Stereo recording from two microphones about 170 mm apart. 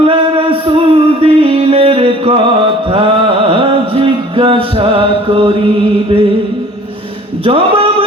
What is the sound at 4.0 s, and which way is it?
Music, 30° right (ahead or behind).